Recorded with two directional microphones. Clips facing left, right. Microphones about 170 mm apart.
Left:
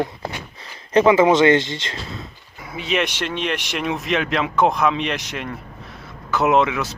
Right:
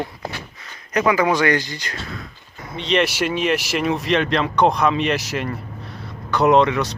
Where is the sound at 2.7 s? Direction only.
5° left (ahead or behind).